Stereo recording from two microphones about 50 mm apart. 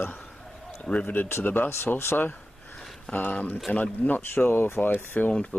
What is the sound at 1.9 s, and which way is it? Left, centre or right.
Speech, left.